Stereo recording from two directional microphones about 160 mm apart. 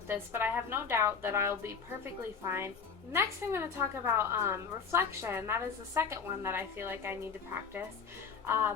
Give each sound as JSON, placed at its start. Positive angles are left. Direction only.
{"t": 0.1, "sound": "a woman's voice", "side_deg": -10}
{"t": 8.4, "sound": "a woman's voice", "side_deg": -15}